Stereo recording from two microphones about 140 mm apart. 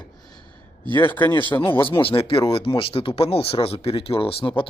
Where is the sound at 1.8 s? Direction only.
40° left (ahead or behind).